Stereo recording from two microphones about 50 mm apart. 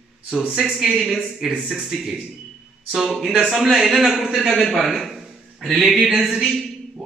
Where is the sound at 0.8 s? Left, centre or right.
Centre.